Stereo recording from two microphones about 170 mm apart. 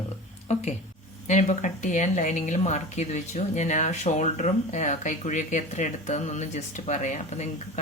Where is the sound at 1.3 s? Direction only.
45° left (ahead or behind).